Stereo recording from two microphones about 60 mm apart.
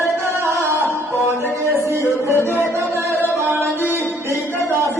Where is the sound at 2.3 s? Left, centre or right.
Left.